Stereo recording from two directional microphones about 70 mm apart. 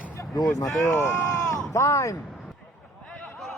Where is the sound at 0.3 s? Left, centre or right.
Left.